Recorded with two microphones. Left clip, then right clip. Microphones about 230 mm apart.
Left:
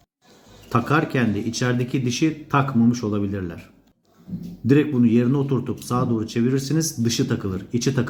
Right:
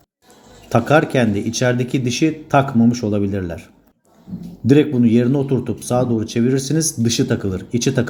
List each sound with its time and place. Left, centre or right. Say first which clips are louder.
0.7 s speech: right 6 dB; centre